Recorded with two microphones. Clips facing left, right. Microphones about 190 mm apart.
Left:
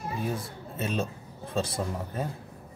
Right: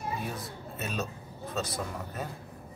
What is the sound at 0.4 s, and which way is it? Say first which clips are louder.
Speech: left 4 dB; 30° left (ahead or behind).